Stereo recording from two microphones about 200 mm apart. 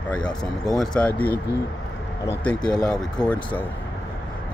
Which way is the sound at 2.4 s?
5° left (ahead or behind).